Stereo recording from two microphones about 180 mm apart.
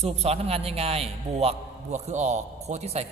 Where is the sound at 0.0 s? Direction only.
35° right (ahead or behind).